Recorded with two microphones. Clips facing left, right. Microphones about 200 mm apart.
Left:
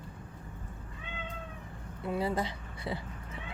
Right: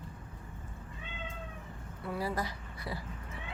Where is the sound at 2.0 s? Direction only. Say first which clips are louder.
Left 4 dB; 25° left (ahead or behind).